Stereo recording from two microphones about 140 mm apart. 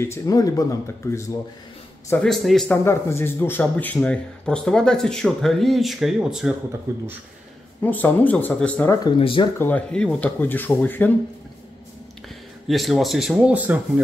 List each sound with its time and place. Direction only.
0.0 s speech: 20° left (ahead or behind)
2.2 s speech: centre (ahead or behind)
2.7 s speech: 20° left (ahead or behind); by 6.5 s 5° right (ahead or behind)
6.9 s speech: 20° right (ahead or behind)
7.8 s speech: 15° left (ahead or behind)
9.2 s speech: 40° left (ahead or behind)
9.6 s speech: 10° left (ahead or behind)
12.6 s speech: centre (ahead or behind)